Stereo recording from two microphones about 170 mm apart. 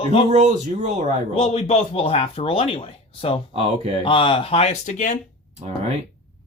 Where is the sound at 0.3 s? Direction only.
40° right (ahead or behind).